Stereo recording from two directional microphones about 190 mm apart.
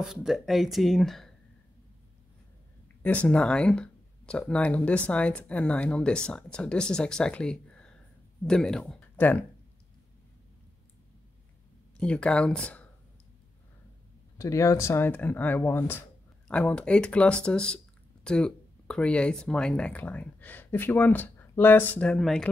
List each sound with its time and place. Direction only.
0.0 s speech: 5° right (ahead or behind)
3.0 s speech: 10° left (ahead or behind)
12.0 s speech: 5° left (ahead or behind)
14.4 s speech: 15° left (ahead or behind)